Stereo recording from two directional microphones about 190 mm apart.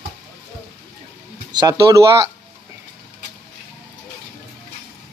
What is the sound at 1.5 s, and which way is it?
Speech, 20° right (ahead or behind).